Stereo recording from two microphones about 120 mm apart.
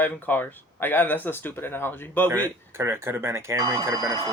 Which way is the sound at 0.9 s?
15° left (ahead or behind).